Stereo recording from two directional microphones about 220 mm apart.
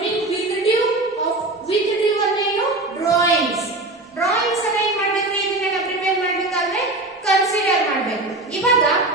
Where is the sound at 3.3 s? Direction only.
Centre (ahead or behind).